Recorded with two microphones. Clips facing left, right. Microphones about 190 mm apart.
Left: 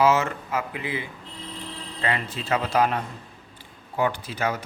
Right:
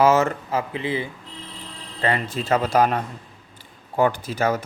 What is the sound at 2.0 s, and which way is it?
Speech, 40° right (ahead or behind).